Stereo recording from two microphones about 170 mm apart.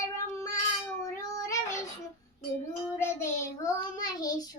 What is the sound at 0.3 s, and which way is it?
Child singing, 20° left (ahead or behind).